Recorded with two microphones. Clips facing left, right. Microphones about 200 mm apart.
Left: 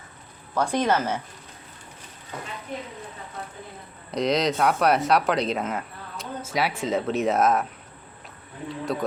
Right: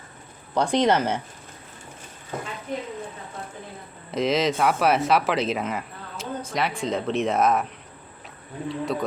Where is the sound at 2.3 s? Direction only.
50° right (ahead or behind).